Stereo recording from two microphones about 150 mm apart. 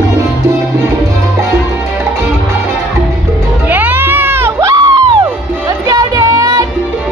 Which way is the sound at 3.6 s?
10° right (ahead or behind).